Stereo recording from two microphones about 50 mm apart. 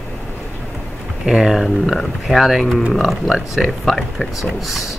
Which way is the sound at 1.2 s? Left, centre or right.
Centre.